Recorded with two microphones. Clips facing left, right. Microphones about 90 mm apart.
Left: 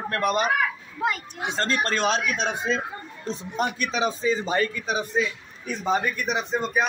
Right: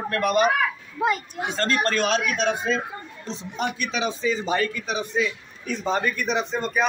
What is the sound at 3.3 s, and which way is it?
Speech, 45° left (ahead or behind).